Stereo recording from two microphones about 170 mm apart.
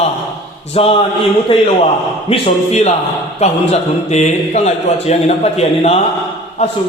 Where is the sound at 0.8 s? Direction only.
35° left (ahead or behind).